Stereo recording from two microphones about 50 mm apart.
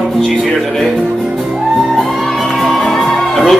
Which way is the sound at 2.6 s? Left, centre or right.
Centre.